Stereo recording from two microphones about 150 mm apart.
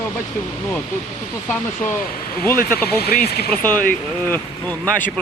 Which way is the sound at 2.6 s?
85° left.